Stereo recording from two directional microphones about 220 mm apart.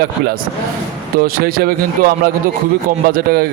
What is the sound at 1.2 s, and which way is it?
Speech, 45° right (ahead or behind).